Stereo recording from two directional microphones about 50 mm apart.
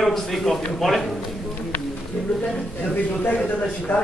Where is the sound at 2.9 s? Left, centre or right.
Left.